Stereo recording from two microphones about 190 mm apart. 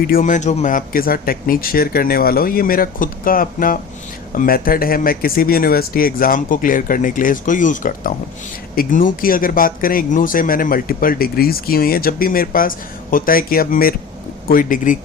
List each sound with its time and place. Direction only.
0.1 s speech: 45° left (ahead or behind)